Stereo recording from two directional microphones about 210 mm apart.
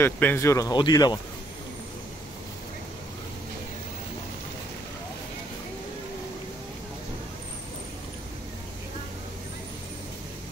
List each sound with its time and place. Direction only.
0.0 s speech: 10° left (ahead or behind)